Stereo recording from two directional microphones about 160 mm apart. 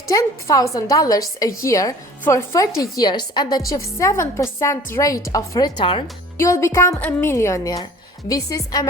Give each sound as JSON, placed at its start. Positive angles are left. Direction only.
{"t": 0.1, "sound": "a woman's voice", "side_deg": 20}
{"t": 6.3, "sound": "a woman's voice", "side_deg": 20}